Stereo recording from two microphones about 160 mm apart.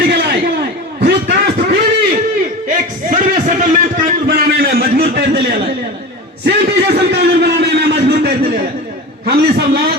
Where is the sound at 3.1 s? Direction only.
50° right (ahead or behind); by 5.6 s 80° right.